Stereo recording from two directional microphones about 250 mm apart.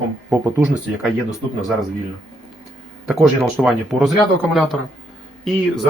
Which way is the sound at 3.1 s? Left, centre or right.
Centre.